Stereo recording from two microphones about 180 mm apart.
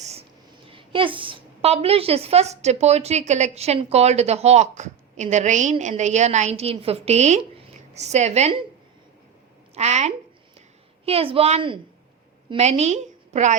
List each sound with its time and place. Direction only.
0.0 s a sound: 35° right (ahead or behind)
0.7 s a woman's voice: 30° right (ahead or behind)
9.7 s a woman's voice: 40° right (ahead or behind)